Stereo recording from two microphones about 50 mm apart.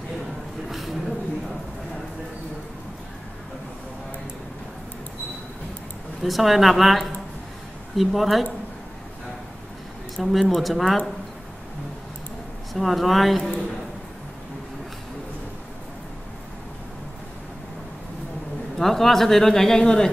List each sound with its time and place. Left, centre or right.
0.7 s a sound: centre
6.2 s a woman's voice: centre
10.1 s a woman's voice: centre
12.7 s a woman's voice: centre
18.8 s speech: centre